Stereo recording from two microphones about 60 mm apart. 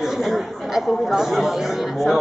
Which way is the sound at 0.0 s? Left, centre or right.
Centre.